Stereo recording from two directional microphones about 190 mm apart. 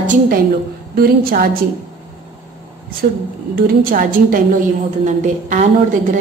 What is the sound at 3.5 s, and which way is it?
A woman's voice, 50° right (ahead or behind).